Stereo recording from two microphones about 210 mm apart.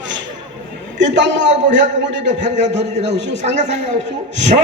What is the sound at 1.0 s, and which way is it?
Speech, 55° right (ahead or behind).